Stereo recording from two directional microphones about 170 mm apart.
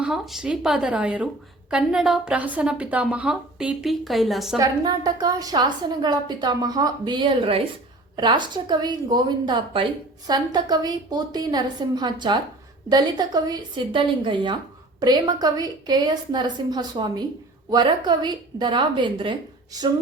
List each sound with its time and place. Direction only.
0.0 s a woman's voice: centre (ahead or behind)
4.5 s a woman's voice: 20° right (ahead or behind)